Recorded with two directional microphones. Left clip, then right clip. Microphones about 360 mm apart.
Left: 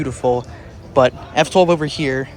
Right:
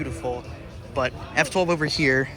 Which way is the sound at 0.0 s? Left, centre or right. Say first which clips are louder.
Left 11 dB; centre.